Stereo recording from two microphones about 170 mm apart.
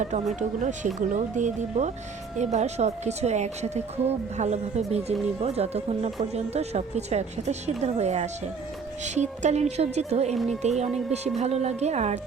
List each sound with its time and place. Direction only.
0.3 s speech: 45° right (ahead or behind)
10.3 s speech: centre (ahead or behind)
10.6 s speech: 40° right (ahead or behind)